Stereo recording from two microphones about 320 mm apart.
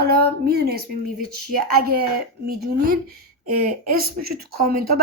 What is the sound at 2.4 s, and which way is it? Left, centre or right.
Speech, right.